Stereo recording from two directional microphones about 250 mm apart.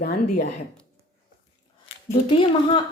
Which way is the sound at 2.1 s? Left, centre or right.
Centre.